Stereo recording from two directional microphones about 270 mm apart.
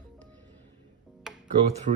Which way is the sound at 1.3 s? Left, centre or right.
Centre.